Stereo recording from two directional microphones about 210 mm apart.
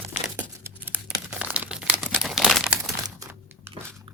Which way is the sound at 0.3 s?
10° right (ahead or behind).